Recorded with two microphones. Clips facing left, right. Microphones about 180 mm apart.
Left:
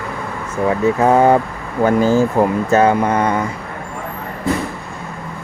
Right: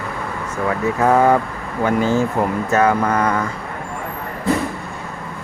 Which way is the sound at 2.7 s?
25° left (ahead or behind).